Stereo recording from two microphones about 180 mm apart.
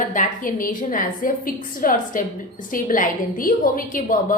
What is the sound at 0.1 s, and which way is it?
A woman's voice, 45° left (ahead or behind).